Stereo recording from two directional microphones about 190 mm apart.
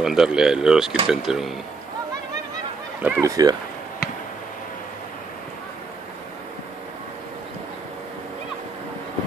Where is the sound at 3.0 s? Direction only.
10° right (ahead or behind).